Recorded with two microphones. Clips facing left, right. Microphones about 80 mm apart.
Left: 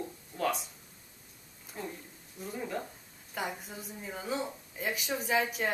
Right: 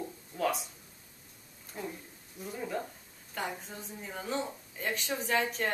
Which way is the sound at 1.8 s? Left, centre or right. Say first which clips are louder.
Right 1 dB; centre.